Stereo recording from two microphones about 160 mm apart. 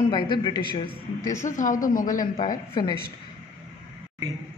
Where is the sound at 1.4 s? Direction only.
50° left (ahead or behind).